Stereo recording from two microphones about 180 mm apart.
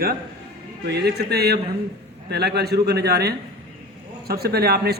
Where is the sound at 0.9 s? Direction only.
65° right (ahead or behind).